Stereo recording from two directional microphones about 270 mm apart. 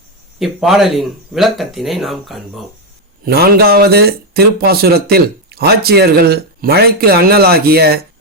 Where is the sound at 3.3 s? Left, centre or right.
Right.